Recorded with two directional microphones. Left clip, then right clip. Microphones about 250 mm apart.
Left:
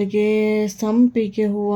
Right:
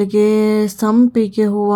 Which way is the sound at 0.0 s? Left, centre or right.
Right.